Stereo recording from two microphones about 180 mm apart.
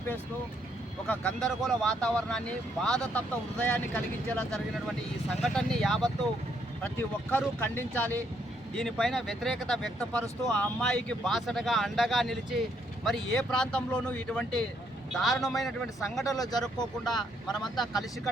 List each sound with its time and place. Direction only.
1.0 s speech: 5° left (ahead or behind)
16.2 s speech: 20° left (ahead or behind)